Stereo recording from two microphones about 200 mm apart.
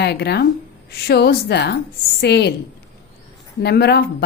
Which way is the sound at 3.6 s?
55° left (ahead or behind).